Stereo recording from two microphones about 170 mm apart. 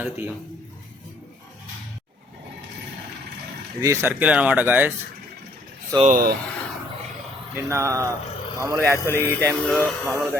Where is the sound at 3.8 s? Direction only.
15° right (ahead or behind).